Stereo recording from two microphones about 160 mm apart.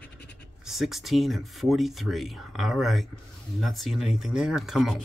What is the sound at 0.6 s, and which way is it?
Speech, centre (ahead or behind).